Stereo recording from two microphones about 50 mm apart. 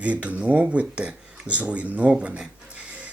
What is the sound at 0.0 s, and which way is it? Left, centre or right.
Speech, right.